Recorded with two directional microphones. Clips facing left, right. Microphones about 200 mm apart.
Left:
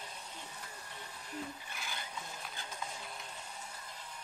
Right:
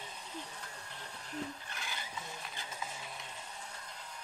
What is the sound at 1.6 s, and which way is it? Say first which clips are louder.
Vehicle: even; centre (ahead or behind).